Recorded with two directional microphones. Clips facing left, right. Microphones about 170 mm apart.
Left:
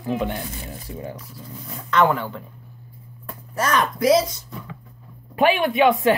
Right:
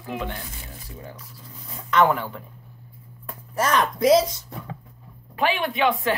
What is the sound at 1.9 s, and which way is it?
Speech, 15° right (ahead or behind).